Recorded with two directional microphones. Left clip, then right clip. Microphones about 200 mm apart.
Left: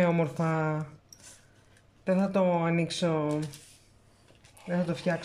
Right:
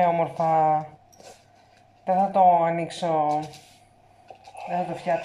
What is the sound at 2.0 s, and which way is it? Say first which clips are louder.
Speech: right 8 dB; 50° left (ahead or behind).